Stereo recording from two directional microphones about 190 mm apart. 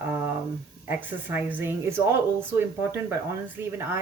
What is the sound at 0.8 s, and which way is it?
Speech, 10° right (ahead or behind).